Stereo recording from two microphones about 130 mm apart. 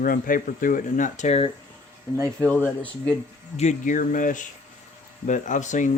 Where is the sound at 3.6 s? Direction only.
75° left (ahead or behind); by 4.4 s 90° left.